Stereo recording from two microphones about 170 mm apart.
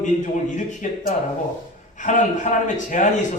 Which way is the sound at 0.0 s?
45° left (ahead or behind).